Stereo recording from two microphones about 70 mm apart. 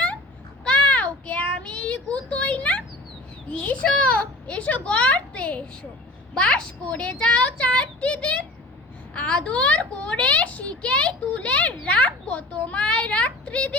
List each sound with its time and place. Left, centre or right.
0.6 s child singing: centre
3.5 s a child's voice: centre